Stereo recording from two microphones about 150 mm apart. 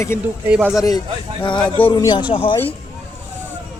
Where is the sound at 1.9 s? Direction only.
25° left (ahead or behind).